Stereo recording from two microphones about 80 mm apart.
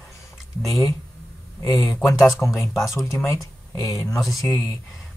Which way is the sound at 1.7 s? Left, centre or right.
Centre.